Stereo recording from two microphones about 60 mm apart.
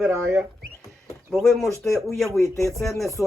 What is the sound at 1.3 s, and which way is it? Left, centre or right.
Speech, centre.